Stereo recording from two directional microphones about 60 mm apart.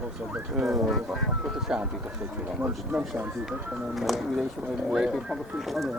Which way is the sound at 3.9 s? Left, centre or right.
Centre.